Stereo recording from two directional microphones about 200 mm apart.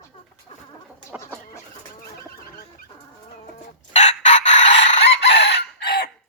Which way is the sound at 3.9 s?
35° left (ahead or behind).